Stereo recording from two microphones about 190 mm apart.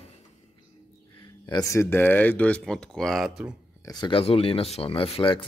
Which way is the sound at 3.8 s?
20° left (ahead or behind).